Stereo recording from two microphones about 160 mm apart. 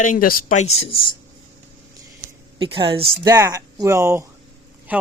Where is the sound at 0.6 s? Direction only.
40° left (ahead or behind).